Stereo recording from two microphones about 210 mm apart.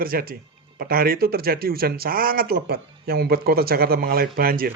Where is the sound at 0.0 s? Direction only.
45° right (ahead or behind).